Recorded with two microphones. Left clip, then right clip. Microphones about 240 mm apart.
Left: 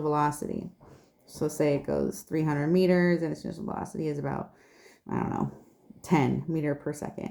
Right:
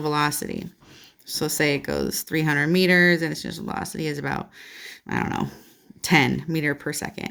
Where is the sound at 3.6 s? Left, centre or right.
Right.